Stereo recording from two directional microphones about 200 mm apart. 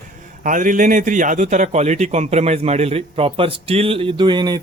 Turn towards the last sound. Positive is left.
turn(degrees=-20)  # may be behind; listen again after turning